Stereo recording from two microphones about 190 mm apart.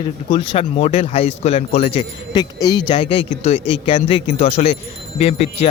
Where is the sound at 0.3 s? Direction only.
30° left (ahead or behind).